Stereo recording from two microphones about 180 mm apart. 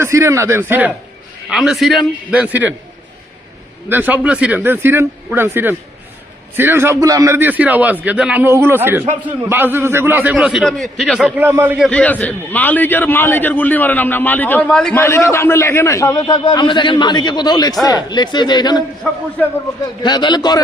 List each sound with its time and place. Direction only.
0.0 s a man's voice: 15° right (ahead or behind)
3.8 s a man's voice: 10° right (ahead or behind)
11.3 s a man's voice: 10° right (ahead or behind)
11.9 s a man's voice: 5° left (ahead or behind); by 18.8 s 25° left (ahead or behind)
20.0 s a man's voice: 25° left (ahead or behind)